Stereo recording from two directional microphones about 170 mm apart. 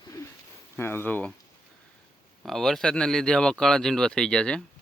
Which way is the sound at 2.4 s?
Centre (ahead or behind).